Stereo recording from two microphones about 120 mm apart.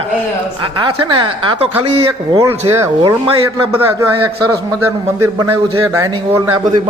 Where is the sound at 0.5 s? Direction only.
40° right (ahead or behind).